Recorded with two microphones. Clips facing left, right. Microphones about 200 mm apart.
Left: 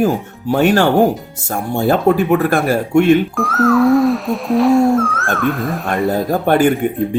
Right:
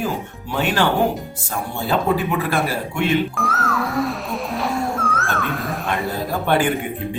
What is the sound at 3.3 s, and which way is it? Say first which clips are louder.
Music: left 10 dB; centre (ahead or behind).